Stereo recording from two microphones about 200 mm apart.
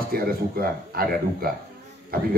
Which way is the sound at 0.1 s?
45° right (ahead or behind).